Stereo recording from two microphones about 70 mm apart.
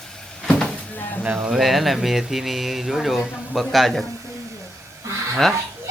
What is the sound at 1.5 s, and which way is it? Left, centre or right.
Speech, centre.